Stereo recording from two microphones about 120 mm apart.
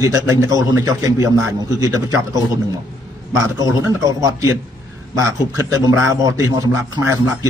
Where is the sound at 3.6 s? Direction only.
30° right (ahead or behind).